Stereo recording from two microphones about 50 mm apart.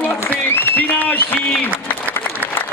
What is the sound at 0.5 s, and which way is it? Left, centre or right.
Applause, left.